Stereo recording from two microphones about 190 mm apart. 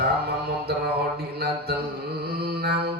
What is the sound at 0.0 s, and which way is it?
Mantra, 55° right (ahead or behind).